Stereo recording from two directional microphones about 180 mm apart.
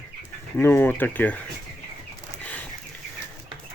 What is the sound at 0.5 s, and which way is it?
Speech, 10° left (ahead or behind).